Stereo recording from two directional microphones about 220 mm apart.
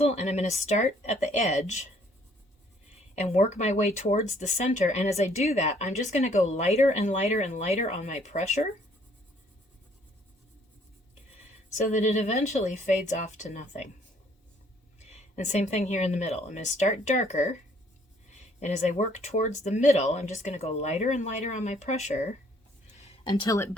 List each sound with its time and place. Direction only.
0.0 s speech: 30° left (ahead or behind)
3.2 s speech: 30° left (ahead or behind)
11.7 s speech: 30° left (ahead or behind)
14.9 s speech: 30° left (ahead or behind)
23.0 s a sound: 20° left (ahead or behind)